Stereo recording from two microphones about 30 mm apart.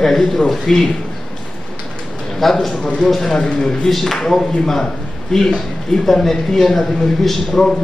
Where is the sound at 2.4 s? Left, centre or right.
Centre.